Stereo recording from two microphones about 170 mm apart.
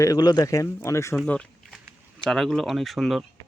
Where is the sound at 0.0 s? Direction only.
25° left (ahead or behind).